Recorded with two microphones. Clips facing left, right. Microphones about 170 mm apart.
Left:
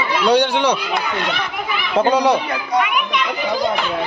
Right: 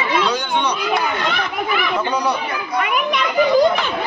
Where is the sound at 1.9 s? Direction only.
85° left.